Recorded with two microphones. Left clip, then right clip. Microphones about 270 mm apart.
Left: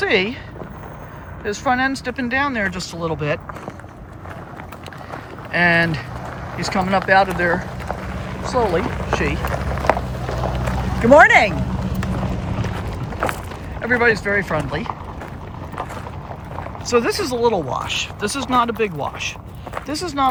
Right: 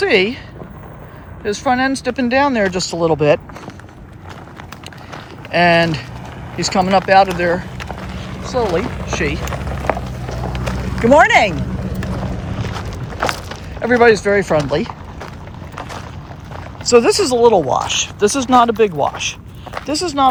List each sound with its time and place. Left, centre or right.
0.0 s speech: centre
1.5 s speech: centre
5.5 s speech: centre
9.9 s a sound: centre
10.2 s clip-clop: centre
11.1 s speech: centre
11.8 s vehicle: left
13.8 s speech: centre
16.8 s speech: centre